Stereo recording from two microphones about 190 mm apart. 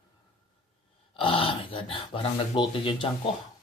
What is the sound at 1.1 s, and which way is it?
Speech, 30° left (ahead or behind).